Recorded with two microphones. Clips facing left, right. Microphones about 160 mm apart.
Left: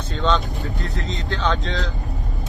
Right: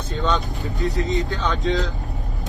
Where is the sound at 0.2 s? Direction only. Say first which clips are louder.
Left 2 dB; centre (ahead or behind).